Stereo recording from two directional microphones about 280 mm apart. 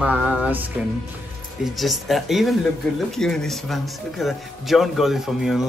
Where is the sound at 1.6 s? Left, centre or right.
Centre.